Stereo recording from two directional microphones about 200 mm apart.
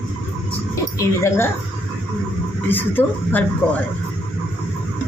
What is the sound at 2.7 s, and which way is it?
Speech, 10° left (ahead or behind).